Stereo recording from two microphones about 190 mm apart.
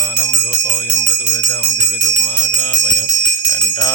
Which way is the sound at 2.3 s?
15° left (ahead or behind).